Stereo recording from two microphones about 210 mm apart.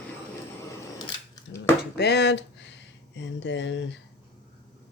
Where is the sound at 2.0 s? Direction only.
55° left (ahead or behind).